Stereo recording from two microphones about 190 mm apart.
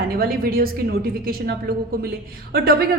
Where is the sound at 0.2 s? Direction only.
50° right (ahead or behind).